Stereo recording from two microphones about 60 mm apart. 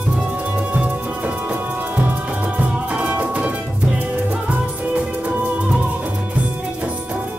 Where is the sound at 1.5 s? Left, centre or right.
Right.